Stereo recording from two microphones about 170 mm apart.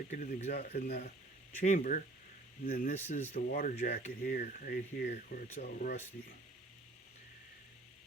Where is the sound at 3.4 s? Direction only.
55° left (ahead or behind).